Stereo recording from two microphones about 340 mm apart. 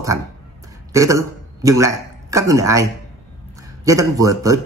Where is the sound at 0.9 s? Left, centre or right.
Centre.